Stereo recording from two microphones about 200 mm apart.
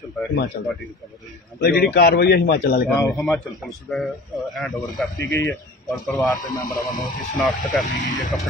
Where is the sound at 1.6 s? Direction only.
50° left (ahead or behind).